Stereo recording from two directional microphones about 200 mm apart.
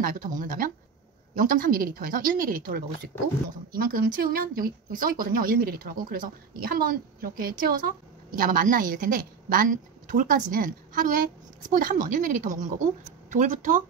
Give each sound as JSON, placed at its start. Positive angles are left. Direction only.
{"t": 0.0, "sound": "speech", "side_deg": -45}